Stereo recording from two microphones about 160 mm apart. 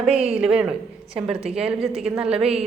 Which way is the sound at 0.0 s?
5° right (ahead or behind).